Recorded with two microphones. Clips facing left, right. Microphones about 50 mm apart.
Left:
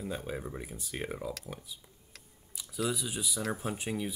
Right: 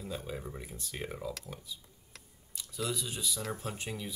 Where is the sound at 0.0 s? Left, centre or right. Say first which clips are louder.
Left 3 dB; left.